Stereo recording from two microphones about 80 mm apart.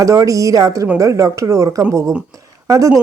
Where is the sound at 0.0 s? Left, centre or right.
Right.